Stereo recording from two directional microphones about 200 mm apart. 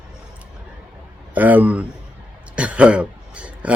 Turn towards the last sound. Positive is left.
turn(degrees=-5)  # may be behind; listen again after turning